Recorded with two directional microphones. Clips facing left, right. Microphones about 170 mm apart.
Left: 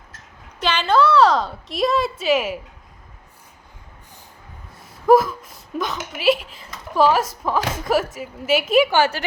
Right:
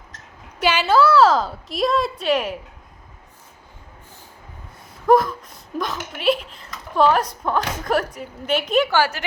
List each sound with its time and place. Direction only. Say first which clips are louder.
0.6 s a woman's voice: right 1 dB; 10° right (ahead or behind)
5.0 s a woman's voice: left 2 dB; 5° left (ahead or behind)
9.0 s a woman's voice: left 2 dB; 25° left (ahead or behind)